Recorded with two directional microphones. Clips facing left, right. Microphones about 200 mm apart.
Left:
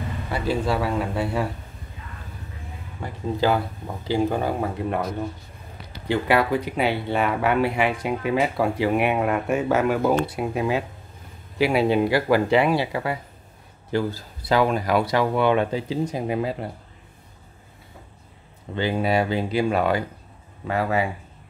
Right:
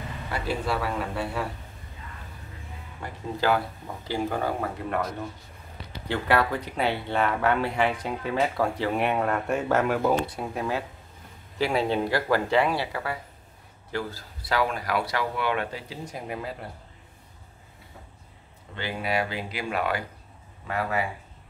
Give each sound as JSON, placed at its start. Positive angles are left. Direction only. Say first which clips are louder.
{"t": 0.7, "sound": "speech", "louder": "left 5 dB", "side_deg": 15}
{"t": 3.3, "sound": "speech", "louder": "left 2 dB", "side_deg": 20}
{"t": 6.0, "sound": "speech", "louder": "left 4 dB", "side_deg": 10}
{"t": 18.9, "sound": "speech", "louder": "left 6 dB", "side_deg": 30}